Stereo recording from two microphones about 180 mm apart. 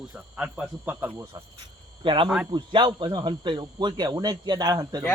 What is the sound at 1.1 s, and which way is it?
Speech, 20° right (ahead or behind).